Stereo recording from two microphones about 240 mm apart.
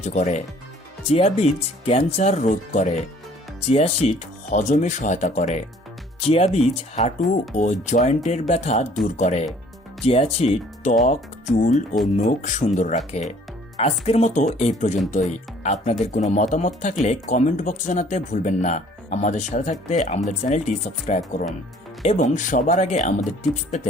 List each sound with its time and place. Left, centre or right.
0.0 s speech: left